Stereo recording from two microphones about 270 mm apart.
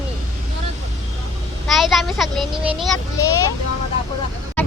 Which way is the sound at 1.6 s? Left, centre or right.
Centre.